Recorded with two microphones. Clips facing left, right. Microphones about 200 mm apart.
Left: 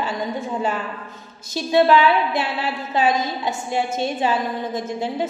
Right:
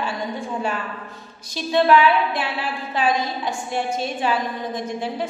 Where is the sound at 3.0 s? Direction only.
25° left (ahead or behind).